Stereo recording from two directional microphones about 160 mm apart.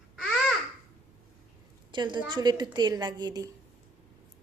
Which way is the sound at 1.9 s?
30° right (ahead or behind).